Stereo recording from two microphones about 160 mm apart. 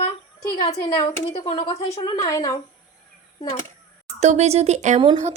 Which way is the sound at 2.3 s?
20° left (ahead or behind).